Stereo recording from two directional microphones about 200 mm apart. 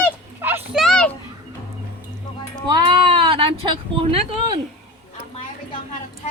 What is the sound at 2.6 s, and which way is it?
Speech, 25° right (ahead or behind).